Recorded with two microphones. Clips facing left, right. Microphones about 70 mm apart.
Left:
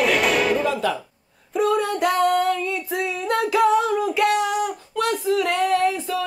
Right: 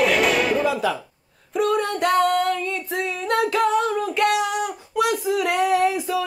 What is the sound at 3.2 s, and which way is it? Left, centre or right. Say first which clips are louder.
Female singing: left 2 dB; centre.